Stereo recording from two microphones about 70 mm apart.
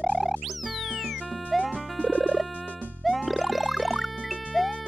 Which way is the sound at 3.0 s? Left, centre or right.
Centre.